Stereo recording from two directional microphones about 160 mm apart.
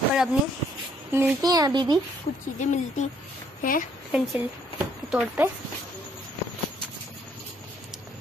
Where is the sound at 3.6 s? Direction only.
55° left (ahead or behind).